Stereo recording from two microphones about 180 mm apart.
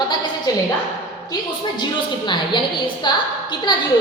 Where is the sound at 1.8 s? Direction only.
25° left (ahead or behind).